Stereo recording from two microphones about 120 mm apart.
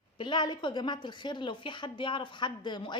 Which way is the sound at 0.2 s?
40° left (ahead or behind).